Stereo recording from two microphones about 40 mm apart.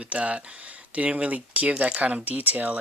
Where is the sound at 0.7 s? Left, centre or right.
Right.